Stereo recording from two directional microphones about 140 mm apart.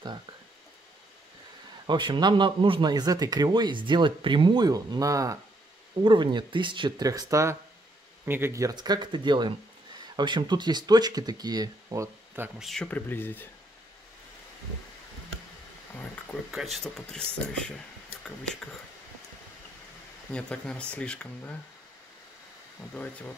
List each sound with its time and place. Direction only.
1.9 s speech: 30° right (ahead or behind)
6.0 s speech: 35° right (ahead or behind)
12.5 s speech: centre (ahead or behind)
15.9 s speech: 15° left (ahead or behind)
16.5 s speech: centre (ahead or behind)
20.2 s speech: 5° left (ahead or behind)
22.9 s speech: 10° left (ahead or behind)